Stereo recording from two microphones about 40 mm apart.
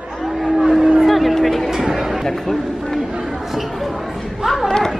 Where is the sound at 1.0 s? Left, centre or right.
Centre.